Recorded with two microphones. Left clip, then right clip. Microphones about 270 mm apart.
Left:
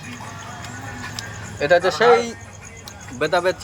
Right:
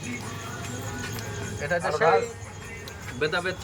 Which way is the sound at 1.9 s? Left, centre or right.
Left.